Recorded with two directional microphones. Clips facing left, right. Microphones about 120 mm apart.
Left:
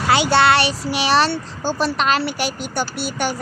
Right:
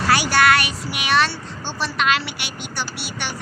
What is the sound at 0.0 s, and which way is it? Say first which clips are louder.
A child's voice: left 2 dB; 20° left (ahead or behind).